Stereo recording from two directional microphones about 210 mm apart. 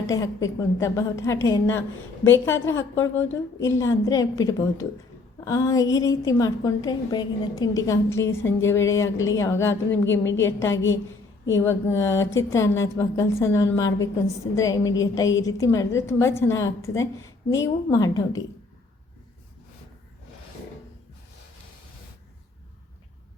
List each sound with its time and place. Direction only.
0.4 s a woman's voice: 15° left (ahead or behind)